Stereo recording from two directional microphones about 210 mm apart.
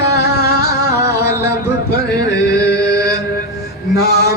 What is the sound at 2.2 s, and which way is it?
Music, 55° left (ahead or behind).